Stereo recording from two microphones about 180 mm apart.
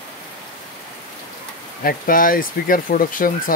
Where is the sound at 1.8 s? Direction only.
50° left (ahead or behind).